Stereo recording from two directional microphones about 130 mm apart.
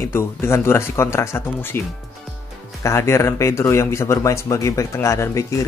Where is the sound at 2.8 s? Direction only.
20° left (ahead or behind).